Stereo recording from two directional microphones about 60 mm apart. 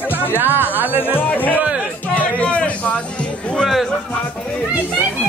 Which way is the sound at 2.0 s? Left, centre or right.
Left.